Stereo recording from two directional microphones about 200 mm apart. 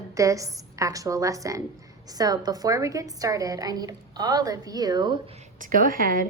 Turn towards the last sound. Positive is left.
turn(degrees=-45)  # may be behind; listen again after turning